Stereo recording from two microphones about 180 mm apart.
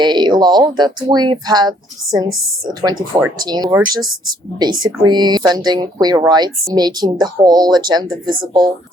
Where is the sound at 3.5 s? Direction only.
25° right (ahead or behind).